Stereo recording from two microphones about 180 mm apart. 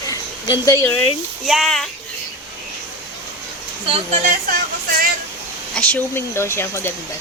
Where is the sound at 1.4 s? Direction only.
Centre (ahead or behind).